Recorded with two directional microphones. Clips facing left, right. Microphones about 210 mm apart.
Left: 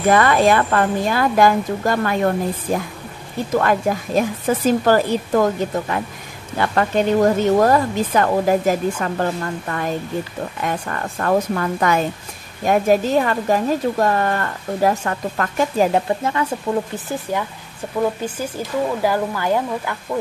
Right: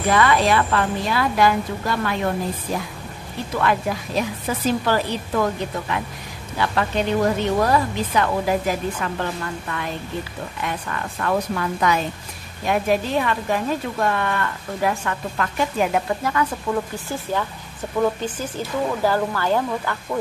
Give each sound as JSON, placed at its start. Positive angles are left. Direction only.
{"t": 0.1, "sound": "speech", "side_deg": 50}
{"t": 3.5, "sound": "speech", "side_deg": 45}
{"t": 15.9, "sound": "speech", "side_deg": 25}
{"t": 19.0, "sound": "speech", "side_deg": 15}